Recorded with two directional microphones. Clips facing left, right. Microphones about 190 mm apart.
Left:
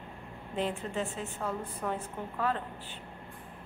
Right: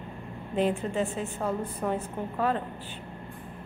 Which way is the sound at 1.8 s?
25° right (ahead or behind).